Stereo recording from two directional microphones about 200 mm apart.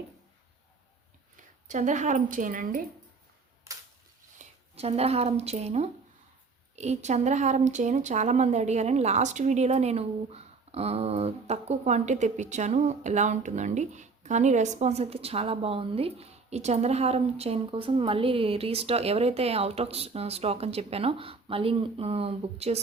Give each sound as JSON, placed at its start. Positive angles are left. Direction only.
{"t": 1.4, "sound": "speech", "side_deg": -40}
{"t": 3.7, "sound": "cap gun", "side_deg": -15}
{"t": 4.4, "sound": "speech", "side_deg": -30}